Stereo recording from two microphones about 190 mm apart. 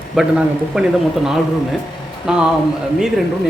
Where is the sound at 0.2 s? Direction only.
5° right (ahead or behind).